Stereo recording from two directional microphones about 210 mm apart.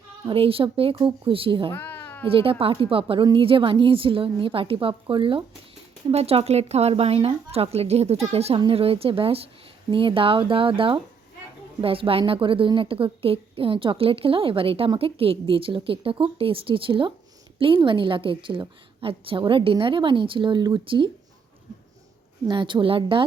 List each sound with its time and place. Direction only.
0.3 s a woman's voice: 25° right (ahead or behind)
1.7 s cat: 10° left (ahead or behind)
2.2 s a woman's voice: 25° right (ahead or behind)
22.4 s a woman's voice: 20° right (ahead or behind)